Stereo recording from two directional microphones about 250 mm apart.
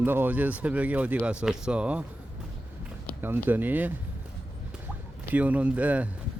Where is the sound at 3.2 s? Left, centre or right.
Centre.